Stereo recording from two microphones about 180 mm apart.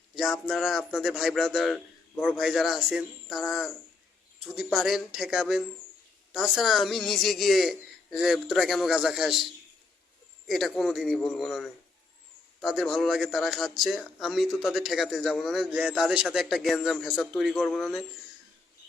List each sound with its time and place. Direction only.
0.2 s speech: centre (ahead or behind)